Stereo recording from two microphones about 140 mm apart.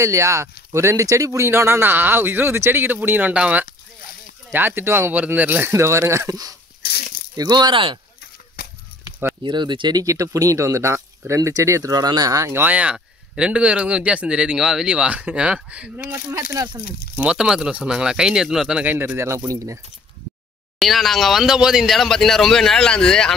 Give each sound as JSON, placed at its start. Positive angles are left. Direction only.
{"t": 0.0, "sound": "speech", "side_deg": -20}
{"t": 8.6, "sound": "honk", "side_deg": 90}
{"t": 9.4, "sound": "speech", "side_deg": -35}
{"t": 17.2, "sound": "speech", "side_deg": -5}
{"t": 20.8, "sound": "speech", "side_deg": 0}